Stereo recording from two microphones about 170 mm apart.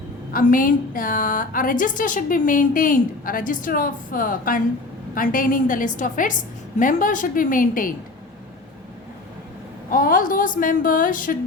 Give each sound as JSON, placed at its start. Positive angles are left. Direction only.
{"t": 0.3, "sound": "a woman's voice", "side_deg": 55}
{"t": 9.9, "sound": "a woman's voice", "side_deg": 55}